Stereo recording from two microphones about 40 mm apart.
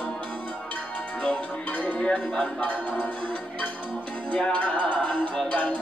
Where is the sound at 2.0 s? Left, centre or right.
Left.